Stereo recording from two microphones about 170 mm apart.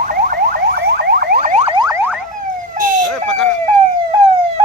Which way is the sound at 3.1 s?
5° left (ahead or behind).